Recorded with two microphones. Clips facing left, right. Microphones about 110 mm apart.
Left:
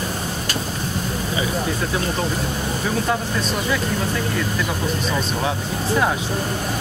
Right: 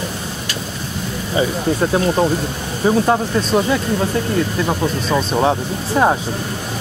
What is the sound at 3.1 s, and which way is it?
Speech, 40° right (ahead or behind).